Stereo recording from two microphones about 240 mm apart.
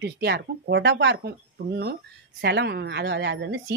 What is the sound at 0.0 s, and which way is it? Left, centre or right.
Speech, right.